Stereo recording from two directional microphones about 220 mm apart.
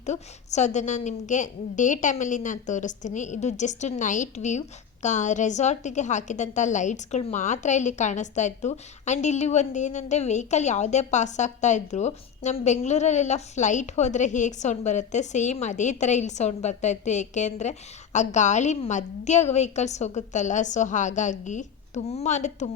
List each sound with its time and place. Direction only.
0.0 s a woman's voice: 30° left (ahead or behind)